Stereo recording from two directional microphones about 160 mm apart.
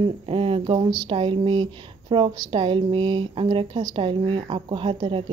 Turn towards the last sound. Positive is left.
turn(degrees=-30)  # may be behind; listen again after turning